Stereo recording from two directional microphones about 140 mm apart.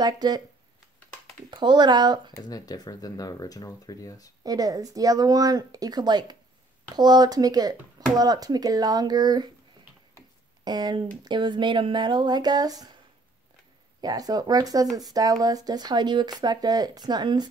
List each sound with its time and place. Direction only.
0.0 s speech: 30° right (ahead or behind)
1.5 s speech: 35° right (ahead or behind)
2.4 s speech: 25° left (ahead or behind)
4.4 s speech: 25° right (ahead or behind)
10.6 s speech: 30° right (ahead or behind)
14.0 s speech: 25° right (ahead or behind)